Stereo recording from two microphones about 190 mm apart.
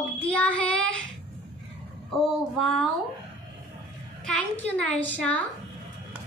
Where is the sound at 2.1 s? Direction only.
Centre (ahead or behind).